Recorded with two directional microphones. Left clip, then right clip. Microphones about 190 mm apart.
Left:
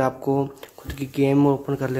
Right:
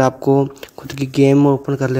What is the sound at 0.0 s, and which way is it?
Speech, 35° right (ahead or behind).